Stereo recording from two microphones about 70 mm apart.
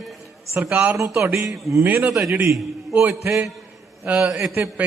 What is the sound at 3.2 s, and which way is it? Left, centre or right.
Speech, right.